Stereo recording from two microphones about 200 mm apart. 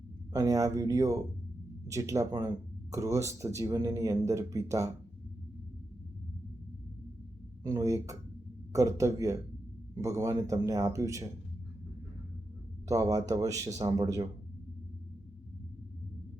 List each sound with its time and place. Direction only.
0.3 s speech: 15° right (ahead or behind)
7.6 s speech: 15° right (ahead or behind)
12.9 s speech: 15° right (ahead or behind)